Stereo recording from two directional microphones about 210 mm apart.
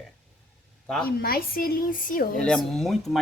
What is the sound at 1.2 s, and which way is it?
Speech, 45° left (ahead or behind).